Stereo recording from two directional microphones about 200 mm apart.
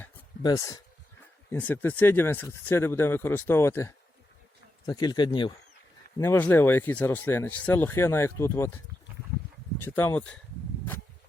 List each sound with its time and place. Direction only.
0.4 s speech: 20° left (ahead or behind)
6.1 s speech: 10° left (ahead or behind)
9.8 s speech: 10° left (ahead or behind)